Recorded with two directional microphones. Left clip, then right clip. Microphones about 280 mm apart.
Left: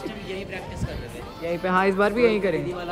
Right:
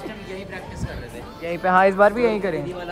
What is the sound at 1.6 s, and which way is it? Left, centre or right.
Speech, centre.